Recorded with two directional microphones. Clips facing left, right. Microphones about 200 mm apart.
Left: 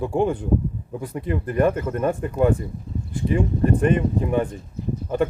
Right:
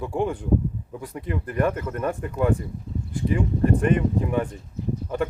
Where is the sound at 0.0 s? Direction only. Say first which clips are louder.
Left 4 dB; 25° left (ahead or behind).